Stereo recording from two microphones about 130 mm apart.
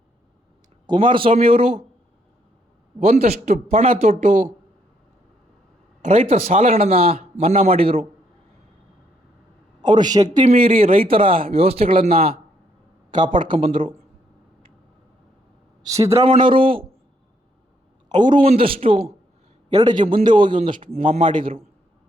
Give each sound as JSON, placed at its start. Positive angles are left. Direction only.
{"t": 0.9, "sound": "a man's voice", "side_deg": -40}
{"t": 3.0, "sound": "a man's voice", "side_deg": -55}
{"t": 6.0, "sound": "a man's voice", "side_deg": -55}
{"t": 9.8, "sound": "a man's voice", "side_deg": -35}
{"t": 10.4, "sound": "a man's voice", "side_deg": -50}
{"t": 13.1, "sound": "a man's voice", "side_deg": -35}
{"t": 15.8, "sound": "a man's voice", "side_deg": -25}
{"t": 16.2, "sound": "a man's voice", "side_deg": -45}
{"t": 18.1, "sound": "a man's voice", "side_deg": -35}
{"t": 19.7, "sound": "a man's voice", "side_deg": -35}